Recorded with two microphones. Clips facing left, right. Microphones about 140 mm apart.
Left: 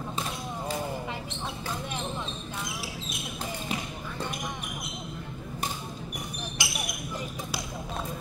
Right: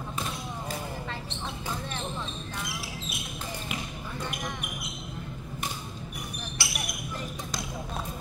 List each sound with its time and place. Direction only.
6.6 s basketball bounce: 15° left (ahead or behind)